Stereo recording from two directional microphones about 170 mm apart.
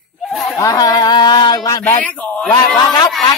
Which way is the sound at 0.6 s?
20° left (ahead or behind).